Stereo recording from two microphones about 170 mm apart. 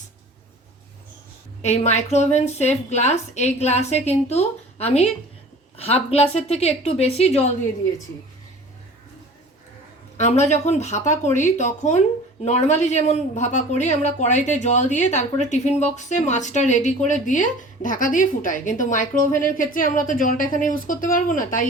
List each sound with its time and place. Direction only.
1.6 s a woman's voice: 40° left (ahead or behind)
10.2 s speech: 40° left (ahead or behind)